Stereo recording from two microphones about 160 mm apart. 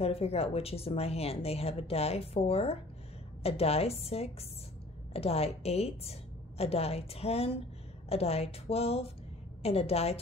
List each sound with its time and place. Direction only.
0.0 s speech: 40° left (ahead or behind)